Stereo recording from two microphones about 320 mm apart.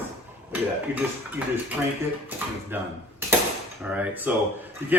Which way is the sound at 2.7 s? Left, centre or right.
Centre.